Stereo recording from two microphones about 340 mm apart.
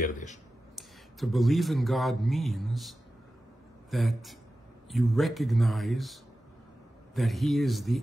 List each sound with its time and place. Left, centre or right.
0.0 s speech: left
0.7 s speech: centre
7.2 s speech: centre